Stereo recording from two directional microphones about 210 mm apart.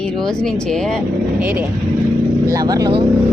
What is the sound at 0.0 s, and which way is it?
Speech, 5° left (ahead or behind).